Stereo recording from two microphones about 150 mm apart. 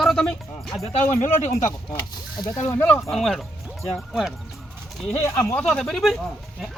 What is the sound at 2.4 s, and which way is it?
Speech, 20° left (ahead or behind).